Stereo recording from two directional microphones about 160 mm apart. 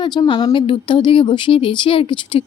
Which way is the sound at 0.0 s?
30° left (ahead or behind).